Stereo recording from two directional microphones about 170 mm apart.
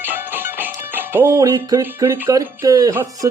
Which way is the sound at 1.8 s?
15° right (ahead or behind).